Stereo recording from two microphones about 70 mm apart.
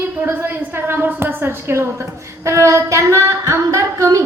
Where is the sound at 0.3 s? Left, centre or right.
Right.